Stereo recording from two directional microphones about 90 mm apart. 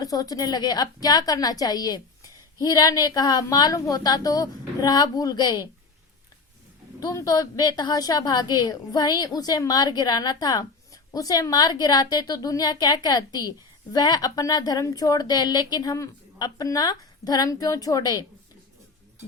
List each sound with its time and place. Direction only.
0.0 s a woman's voice: 45° left (ahead or behind)
7.0 s a woman's voice: 40° left (ahead or behind)